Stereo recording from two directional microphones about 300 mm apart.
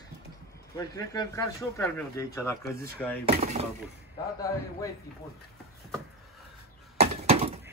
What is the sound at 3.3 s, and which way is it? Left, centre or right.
Speech, right.